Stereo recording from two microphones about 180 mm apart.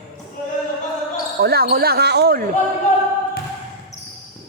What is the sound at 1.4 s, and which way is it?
Speech, 60° right (ahead or behind).